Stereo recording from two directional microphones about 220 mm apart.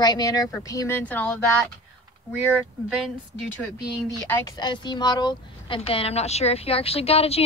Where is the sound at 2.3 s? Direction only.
Centre (ahead or behind).